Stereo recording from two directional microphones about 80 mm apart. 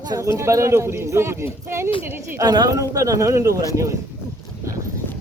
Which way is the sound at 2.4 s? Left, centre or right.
Right.